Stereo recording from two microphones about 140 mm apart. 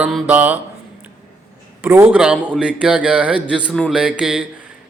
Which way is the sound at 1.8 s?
15° right (ahead or behind).